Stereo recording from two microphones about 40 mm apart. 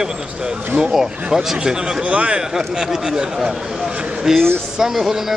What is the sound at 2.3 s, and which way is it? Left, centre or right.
Speech, centre.